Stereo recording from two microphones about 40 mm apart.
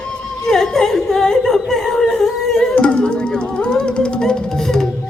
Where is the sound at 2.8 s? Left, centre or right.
Left.